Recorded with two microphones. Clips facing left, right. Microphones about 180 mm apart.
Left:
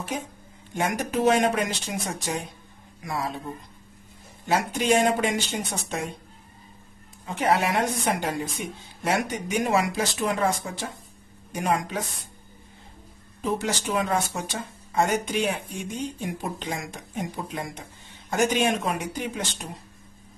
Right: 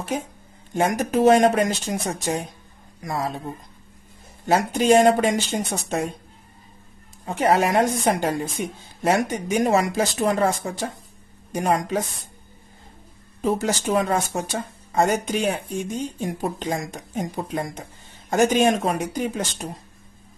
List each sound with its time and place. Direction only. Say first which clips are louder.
0.7 s speech: right 5 dB; 45° right (ahead or behind)
4.5 s speech: right 5 dB; 40° right (ahead or behind)
7.2 s speech: right 4 dB; 45° right (ahead or behind)
13.4 s speech: right 4 dB; 40° right (ahead or behind)